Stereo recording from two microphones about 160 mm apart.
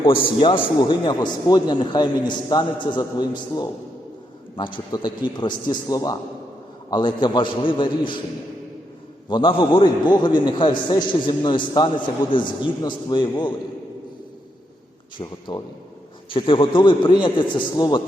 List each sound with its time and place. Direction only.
0.0 s a man's voice: 30° left (ahead or behind)
9.3 s a man's voice: 35° left (ahead or behind)
15.2 s a man's voice: 30° left (ahead or behind)